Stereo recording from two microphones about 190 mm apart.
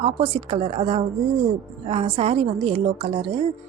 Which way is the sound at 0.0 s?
30° right (ahead or behind).